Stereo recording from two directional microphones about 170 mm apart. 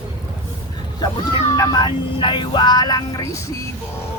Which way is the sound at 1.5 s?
20° left (ahead or behind).